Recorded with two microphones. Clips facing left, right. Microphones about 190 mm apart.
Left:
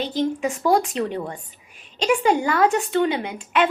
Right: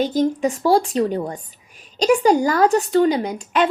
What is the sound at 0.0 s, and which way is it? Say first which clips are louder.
A woman's voice: right 4 dB; 45° right (ahead or behind).